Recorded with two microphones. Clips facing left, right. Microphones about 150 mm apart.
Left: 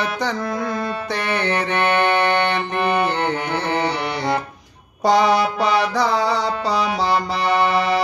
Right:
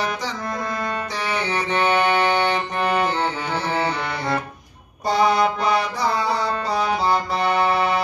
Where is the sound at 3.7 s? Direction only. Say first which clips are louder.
Left 2 dB; 15° left (ahead or behind).